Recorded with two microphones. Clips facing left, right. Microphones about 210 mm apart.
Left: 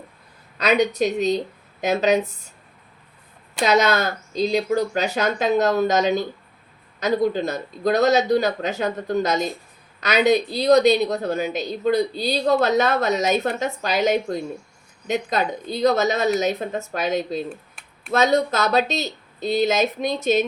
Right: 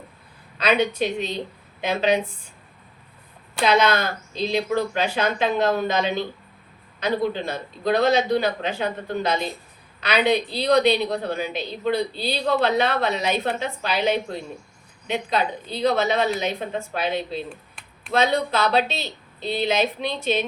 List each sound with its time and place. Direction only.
0.6 s speech: 40° left (ahead or behind)
3.6 s speech: 45° left (ahead or behind)
17.8 s a sound: centre (ahead or behind)
18.1 s speech: 40° left (ahead or behind)